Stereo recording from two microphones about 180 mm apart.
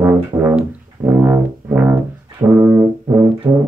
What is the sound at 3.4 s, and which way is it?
Music, 15° right (ahead or behind).